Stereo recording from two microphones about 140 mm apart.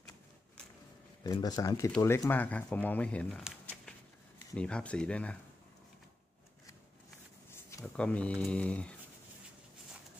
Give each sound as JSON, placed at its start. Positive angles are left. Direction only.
{"t": 1.2, "sound": "speech", "side_deg": 30}
{"t": 4.6, "sound": "speech", "side_deg": 5}
{"t": 7.8, "sound": "speech", "side_deg": 5}